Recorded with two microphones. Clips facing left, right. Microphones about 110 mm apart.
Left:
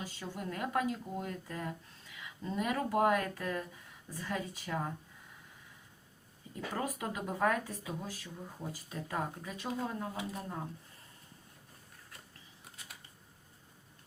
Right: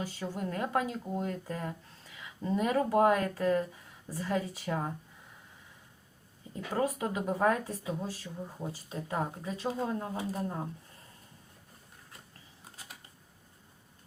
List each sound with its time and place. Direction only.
0.0 s speech: 35° right (ahead or behind)
6.5 s speech: 30° right (ahead or behind)